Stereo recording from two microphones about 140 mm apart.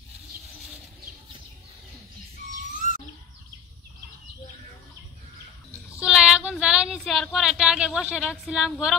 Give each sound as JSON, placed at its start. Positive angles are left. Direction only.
{"t": 2.8, "sound": "bird", "side_deg": 60}
{"t": 5.9, "sound": "speech", "side_deg": -5}